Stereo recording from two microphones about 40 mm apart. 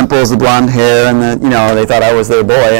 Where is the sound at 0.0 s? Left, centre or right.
Centre.